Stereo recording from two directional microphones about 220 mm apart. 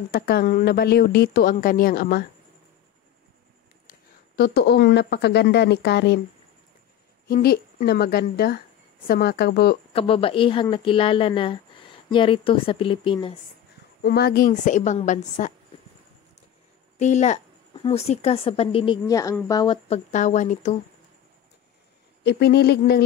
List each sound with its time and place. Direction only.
0.1 s a woman's voice: 45° left (ahead or behind)
4.4 s a woman's voice: 50° left (ahead or behind)
7.2 s a woman's voice: 45° left (ahead or behind)
9.9 s speech: 25° left (ahead or behind)
14.0 s a woman's voice: 45° left (ahead or behind)
17.0 s speech: 30° left (ahead or behind)
20.1 s a woman's voice: 35° left (ahead or behind)
22.2 s a woman's voice: 50° left (ahead or behind)